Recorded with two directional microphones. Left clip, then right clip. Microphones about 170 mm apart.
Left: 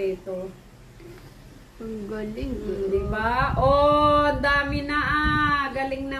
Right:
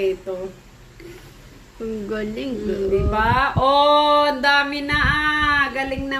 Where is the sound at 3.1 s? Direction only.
10° left (ahead or behind).